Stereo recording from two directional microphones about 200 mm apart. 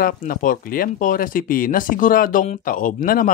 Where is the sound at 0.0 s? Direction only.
45° left (ahead or behind).